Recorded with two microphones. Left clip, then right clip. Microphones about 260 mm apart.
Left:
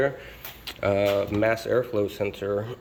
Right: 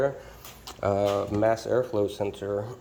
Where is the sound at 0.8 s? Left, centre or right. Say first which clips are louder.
Left 2 dB; centre.